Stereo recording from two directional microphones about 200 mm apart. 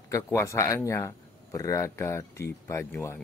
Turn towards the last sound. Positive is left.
turn(degrees=15)  # may be behind; listen again after turning